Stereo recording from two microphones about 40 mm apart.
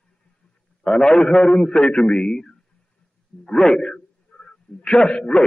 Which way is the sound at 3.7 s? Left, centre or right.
Left.